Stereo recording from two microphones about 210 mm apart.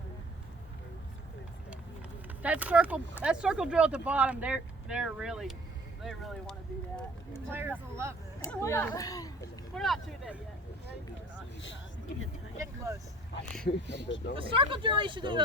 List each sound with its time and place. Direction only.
2.4 s speech: 5° right (ahead or behind)
7.5 s speech: 10° right (ahead or behind)
8.4 s speech: 10° left (ahead or behind)
9.7 s speech: centre (ahead or behind)
12.5 s speech: 15° right (ahead or behind)
14.3 s speech: 25° right (ahead or behind)